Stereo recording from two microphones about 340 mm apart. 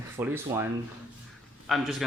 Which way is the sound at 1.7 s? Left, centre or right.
Centre.